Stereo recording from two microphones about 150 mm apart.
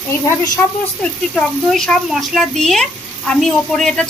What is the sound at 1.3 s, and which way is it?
Speech, 5° left (ahead or behind).